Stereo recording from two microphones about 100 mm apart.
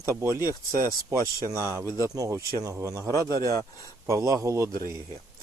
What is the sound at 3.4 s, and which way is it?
Speech, 30° left (ahead or behind).